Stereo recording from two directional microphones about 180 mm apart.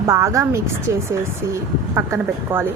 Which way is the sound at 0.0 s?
15° right (ahead or behind).